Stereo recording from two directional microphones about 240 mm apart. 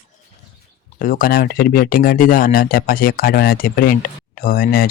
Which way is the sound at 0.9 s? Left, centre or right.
Left.